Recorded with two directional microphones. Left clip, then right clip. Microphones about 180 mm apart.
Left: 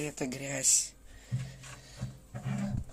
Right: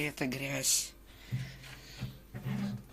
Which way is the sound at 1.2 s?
20° left (ahead or behind).